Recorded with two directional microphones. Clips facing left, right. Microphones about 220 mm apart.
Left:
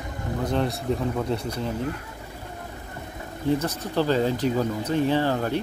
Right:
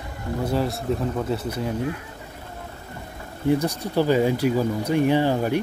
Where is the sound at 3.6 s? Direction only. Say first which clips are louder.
Right 3 dB; 10° right (ahead or behind).